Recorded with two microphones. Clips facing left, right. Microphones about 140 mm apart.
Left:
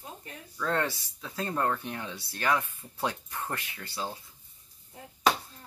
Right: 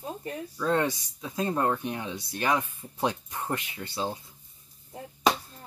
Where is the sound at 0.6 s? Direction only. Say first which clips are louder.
Right 3 dB; 15° right (ahead or behind).